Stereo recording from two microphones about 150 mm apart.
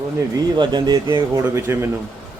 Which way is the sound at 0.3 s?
30° right (ahead or behind).